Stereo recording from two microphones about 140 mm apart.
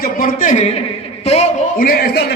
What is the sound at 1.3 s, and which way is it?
Speech, 50° left (ahead or behind).